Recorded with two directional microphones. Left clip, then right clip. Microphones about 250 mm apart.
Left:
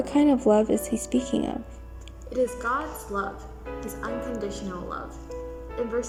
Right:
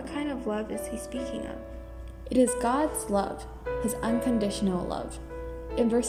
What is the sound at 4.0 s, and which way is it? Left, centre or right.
A woman's voice, right.